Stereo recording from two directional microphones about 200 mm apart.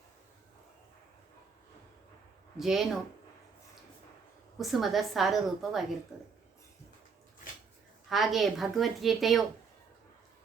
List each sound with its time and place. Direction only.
2.6 s a woman's voice: centre (ahead or behind)
4.5 s a woman's voice: centre (ahead or behind)
8.1 s a woman's voice: centre (ahead or behind)